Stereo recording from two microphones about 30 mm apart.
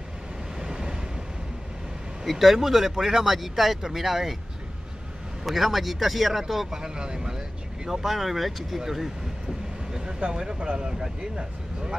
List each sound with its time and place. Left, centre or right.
0.6 s waves: right
2.2 s speech: centre
3.3 s speech: centre
5.4 s speech: centre
6.8 s speech: right; by 9.1 s centre
10.3 s speech: right